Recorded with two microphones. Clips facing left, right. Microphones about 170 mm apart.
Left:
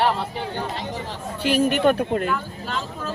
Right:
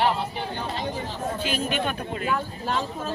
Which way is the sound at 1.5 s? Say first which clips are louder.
Left 12 dB; 65° left (ahead or behind).